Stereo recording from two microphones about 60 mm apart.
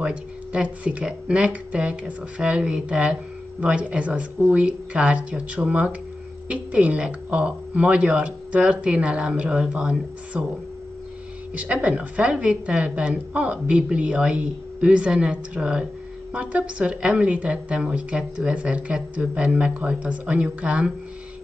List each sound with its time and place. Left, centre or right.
0.0 s a woman's voice: right
11.5 s a woman's voice: right